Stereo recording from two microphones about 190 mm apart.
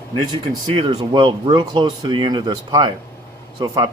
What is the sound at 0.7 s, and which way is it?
Speech, 25° right (ahead or behind).